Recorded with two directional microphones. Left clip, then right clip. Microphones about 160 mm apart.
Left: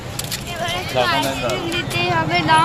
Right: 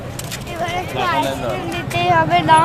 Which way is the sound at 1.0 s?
75° left (ahead or behind).